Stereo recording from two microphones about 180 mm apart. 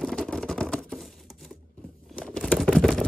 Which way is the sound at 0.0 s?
Centre (ahead or behind).